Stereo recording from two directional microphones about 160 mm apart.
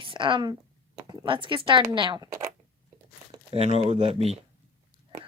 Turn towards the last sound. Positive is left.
turn(degrees=-40)  # may be behind; listen again after turning